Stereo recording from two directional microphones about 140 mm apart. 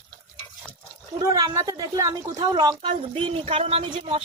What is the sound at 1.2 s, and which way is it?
A woman's voice, 25° right (ahead or behind).